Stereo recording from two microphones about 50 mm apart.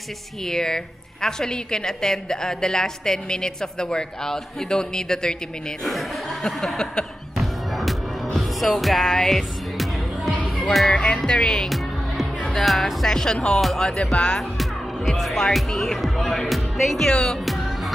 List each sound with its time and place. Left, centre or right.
0.5 s a woman's voice: centre
5.9 s a woman's voice: centre
7.3 s music: centre
10.4 s music: centre
10.9 s a woman's voice: left
11.7 s music: centre
13.1 s a woman's voice: centre
13.6 s speech: centre
13.8 s speech: centre
14.6 s speech: centre